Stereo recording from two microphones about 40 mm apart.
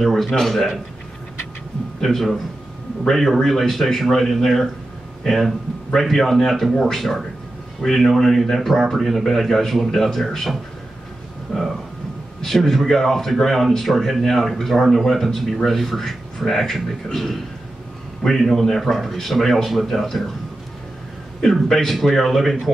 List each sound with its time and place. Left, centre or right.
0.0 s speech: centre
2.0 s a man's voice: centre
3.3 s speech: centre
5.9 s speech: centre
12.4 s speech: centre
18.4 s speech: centre
21.6 s speech: centre